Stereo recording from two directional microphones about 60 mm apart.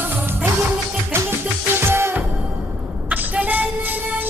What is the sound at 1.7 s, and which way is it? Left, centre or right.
Music, right.